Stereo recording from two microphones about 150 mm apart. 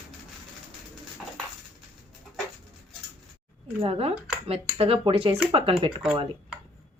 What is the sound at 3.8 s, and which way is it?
Speech, 40° right (ahead or behind).